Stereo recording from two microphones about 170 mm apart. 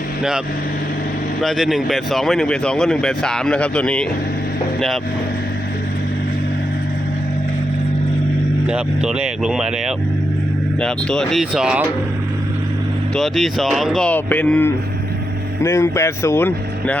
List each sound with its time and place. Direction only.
0.2 s speech: 5° right (ahead or behind)
8.6 s speech: 5° right (ahead or behind)
13.1 s speech: centre (ahead or behind)